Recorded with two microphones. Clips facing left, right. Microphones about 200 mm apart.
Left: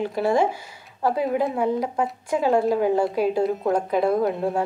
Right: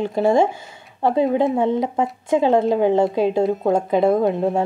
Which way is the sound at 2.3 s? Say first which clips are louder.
Right 4 dB; 25° right (ahead or behind).